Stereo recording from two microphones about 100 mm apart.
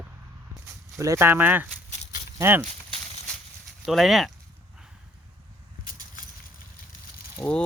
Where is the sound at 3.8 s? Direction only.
Centre (ahead or behind).